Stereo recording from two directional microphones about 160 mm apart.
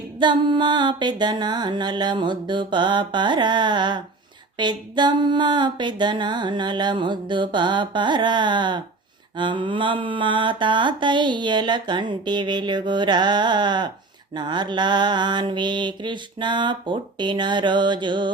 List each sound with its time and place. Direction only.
0.2 s mantra: 30° right (ahead or behind)